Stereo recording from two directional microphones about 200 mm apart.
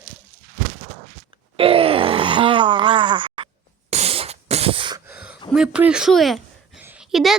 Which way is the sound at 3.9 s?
30° right (ahead or behind).